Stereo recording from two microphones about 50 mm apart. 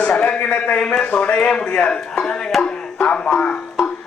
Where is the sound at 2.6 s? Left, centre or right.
Left.